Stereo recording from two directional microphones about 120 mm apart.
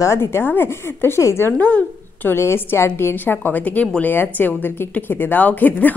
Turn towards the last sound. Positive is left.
turn(degrees=15)  # may be behind; listen again after turning